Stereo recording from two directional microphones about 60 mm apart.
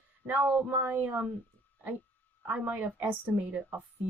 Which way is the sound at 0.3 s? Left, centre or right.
Right.